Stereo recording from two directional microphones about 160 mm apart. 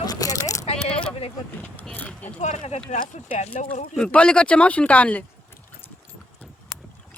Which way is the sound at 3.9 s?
5° left (ahead or behind).